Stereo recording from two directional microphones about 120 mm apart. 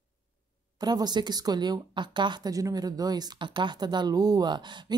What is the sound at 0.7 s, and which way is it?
Speech, 35° right (ahead or behind).